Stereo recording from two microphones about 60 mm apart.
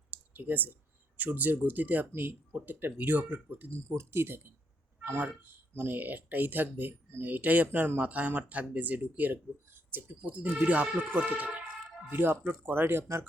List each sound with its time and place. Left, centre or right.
0.1 s speech: right
3.8 s speech: right